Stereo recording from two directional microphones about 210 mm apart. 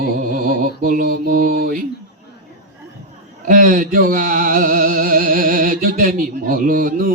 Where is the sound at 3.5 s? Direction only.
40° right (ahead or behind).